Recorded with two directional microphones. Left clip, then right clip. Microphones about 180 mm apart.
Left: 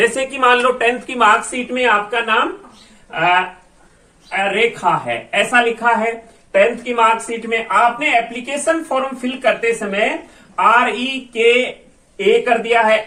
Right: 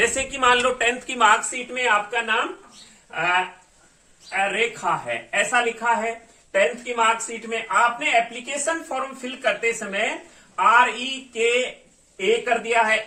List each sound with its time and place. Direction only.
0.0 s a woman's voice: 20° right (ahead or behind); by 12.7 s centre (ahead or behind)